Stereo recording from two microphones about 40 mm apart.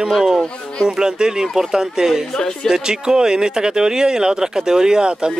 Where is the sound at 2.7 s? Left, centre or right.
Centre.